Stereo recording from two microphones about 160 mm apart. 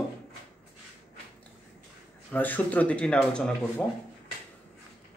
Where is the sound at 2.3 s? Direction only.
10° left (ahead or behind).